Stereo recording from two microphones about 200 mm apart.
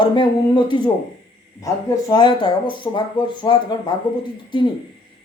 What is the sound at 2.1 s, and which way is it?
Speech, 20° left (ahead or behind).